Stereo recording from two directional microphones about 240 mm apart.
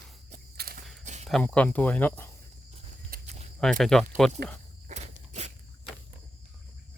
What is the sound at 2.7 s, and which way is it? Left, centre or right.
Walk, right.